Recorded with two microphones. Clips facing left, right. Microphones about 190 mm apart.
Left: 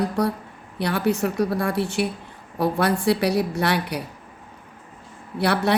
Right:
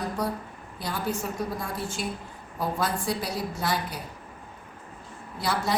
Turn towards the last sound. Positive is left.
turn(degrees=65)  # may be behind; listen again after turning